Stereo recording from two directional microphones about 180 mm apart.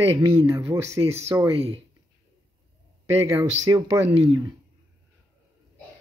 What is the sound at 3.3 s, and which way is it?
Speech, 20° right (ahead or behind).